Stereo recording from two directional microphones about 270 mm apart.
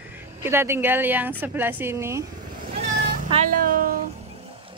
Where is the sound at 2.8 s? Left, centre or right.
Right.